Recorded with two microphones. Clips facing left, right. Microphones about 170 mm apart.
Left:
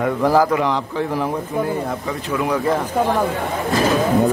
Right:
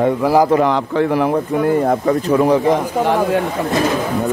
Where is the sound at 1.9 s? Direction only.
45° right (ahead or behind).